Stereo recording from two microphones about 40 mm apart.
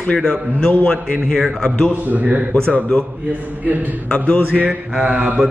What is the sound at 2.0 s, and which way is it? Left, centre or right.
Music, right.